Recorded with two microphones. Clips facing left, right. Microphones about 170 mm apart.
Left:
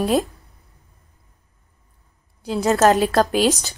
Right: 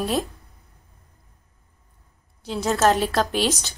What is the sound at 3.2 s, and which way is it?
Speech, 40° left (ahead or behind).